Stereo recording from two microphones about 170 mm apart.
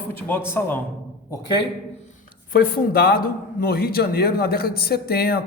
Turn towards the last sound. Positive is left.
turn(degrees=65)  # may be behind; listen again after turning